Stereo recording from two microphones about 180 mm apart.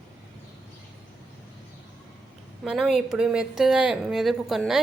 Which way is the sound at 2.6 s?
5° right (ahead or behind).